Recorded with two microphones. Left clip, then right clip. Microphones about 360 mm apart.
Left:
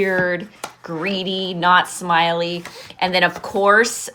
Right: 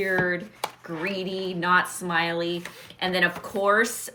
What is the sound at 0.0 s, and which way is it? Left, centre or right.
Speech, centre.